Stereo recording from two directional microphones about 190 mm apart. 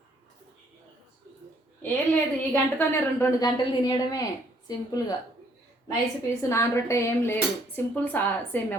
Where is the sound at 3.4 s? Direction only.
20° left (ahead or behind).